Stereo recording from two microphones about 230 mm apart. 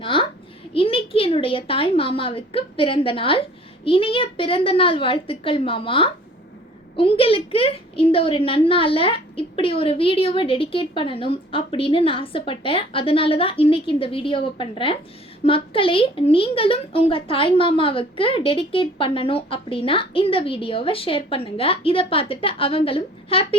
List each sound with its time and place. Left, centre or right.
0.0 s a child's voice: left